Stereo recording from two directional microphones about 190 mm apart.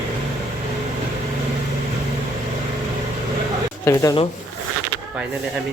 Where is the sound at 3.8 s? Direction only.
15° left (ahead or behind).